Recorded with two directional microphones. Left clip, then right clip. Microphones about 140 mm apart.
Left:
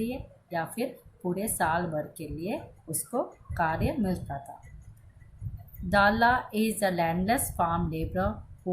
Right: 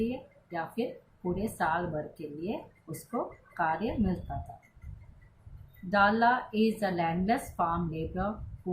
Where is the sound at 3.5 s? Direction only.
35° left (ahead or behind).